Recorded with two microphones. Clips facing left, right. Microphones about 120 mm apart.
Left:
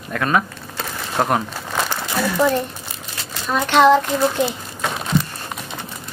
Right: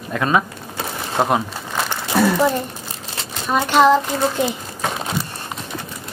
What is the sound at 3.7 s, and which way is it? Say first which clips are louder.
Speech: left 1 dB; 5° right (ahead or behind).